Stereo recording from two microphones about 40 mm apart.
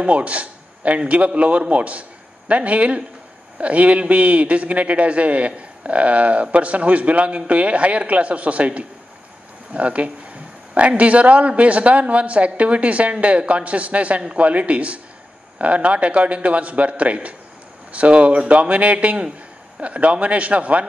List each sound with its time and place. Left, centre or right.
0.0 s a man's voice: right